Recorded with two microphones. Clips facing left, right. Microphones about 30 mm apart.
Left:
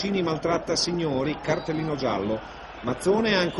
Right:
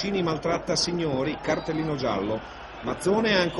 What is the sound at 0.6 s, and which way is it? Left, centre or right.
Speech, centre.